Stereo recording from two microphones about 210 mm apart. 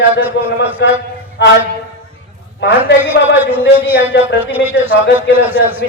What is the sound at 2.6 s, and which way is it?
Speech, 60° left (ahead or behind).